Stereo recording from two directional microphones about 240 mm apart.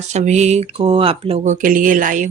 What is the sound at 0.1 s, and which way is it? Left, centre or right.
Speech, right.